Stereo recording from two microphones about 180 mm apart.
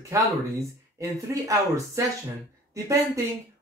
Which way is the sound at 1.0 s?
15° right (ahead or behind).